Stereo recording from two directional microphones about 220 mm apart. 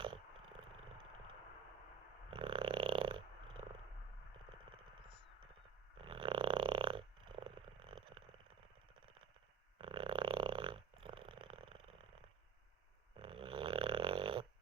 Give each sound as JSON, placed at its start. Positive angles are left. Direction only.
{"t": 2.3, "sound": "a sound", "side_deg": -20}
{"t": 6.0, "sound": "purr", "side_deg": -25}
{"t": 9.7, "sound": "purr", "side_deg": -25}
{"t": 13.1, "sound": "snoring", "side_deg": -25}